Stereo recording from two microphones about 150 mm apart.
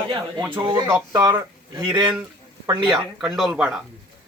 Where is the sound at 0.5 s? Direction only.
30° right (ahead or behind).